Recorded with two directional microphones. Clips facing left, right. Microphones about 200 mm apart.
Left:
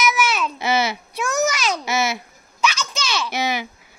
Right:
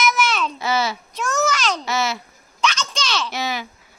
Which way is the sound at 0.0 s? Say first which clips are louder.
Even; 10° left (ahead or behind).